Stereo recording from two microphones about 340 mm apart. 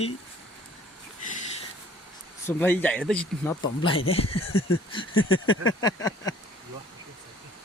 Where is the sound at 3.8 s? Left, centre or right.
Centre.